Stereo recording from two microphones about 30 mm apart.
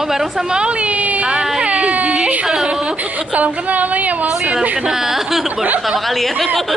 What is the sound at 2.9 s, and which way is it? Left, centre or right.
A woman's voice, right.